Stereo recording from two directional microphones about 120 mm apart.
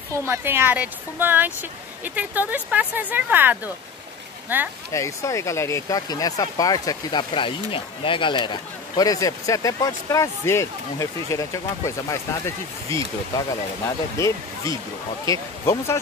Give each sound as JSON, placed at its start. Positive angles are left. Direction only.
{"t": 0.1, "sound": "speech", "side_deg": -20}
{"t": 4.9, "sound": "speech", "side_deg": 25}
{"t": 14.1, "sound": "speech", "side_deg": 25}